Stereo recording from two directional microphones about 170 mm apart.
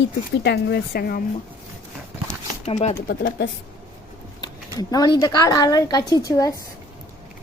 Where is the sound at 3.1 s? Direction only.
60° left (ahead or behind).